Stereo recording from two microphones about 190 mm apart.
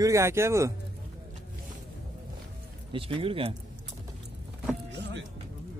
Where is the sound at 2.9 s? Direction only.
25° right (ahead or behind).